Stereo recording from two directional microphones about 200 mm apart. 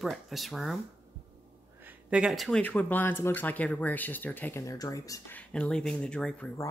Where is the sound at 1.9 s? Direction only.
5° right (ahead or behind); by 5.4 s 15° left (ahead or behind).